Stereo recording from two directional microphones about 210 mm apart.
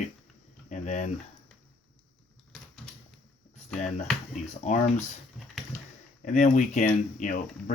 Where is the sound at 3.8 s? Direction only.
35° left (ahead or behind).